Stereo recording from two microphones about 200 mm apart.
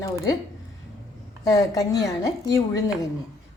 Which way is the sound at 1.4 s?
20° left (ahead or behind).